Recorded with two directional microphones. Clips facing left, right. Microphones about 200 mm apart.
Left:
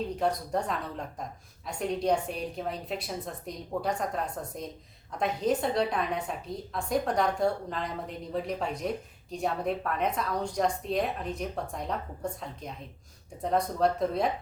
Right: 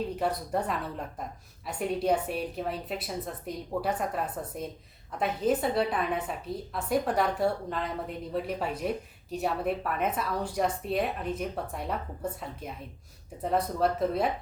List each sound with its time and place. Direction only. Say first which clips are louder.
0.2 s a woman's voice: left 2 dB; 5° right (ahead or behind)